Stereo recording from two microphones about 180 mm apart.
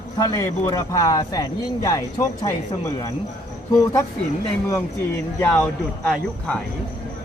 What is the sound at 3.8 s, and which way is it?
Speech, 15° left (ahead or behind).